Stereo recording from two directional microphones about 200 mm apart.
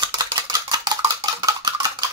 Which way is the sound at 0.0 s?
20° right (ahead or behind).